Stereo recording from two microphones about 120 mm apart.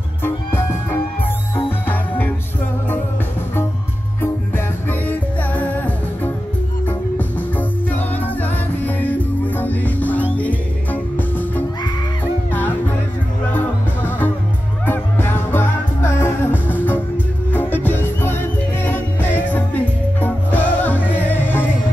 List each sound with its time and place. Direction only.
0.2 s music: 20° left (ahead or behind)
1.9 s music: 15° left (ahead or behind)
5.0 s music: 15° left (ahead or behind)
6.9 s music: 15° left (ahead or behind)